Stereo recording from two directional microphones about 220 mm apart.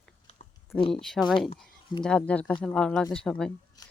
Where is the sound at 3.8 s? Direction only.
20° left (ahead or behind).